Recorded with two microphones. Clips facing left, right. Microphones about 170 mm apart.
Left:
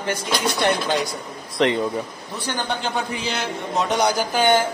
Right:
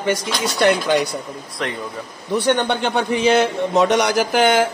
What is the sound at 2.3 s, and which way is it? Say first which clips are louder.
Speech: right 9 dB; 65° right (ahead or behind).